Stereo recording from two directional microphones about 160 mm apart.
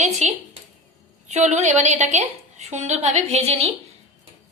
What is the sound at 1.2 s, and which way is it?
A woman's voice, 45° right (ahead or behind).